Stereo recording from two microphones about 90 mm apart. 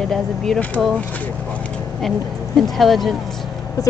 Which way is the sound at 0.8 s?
5° left (ahead or behind).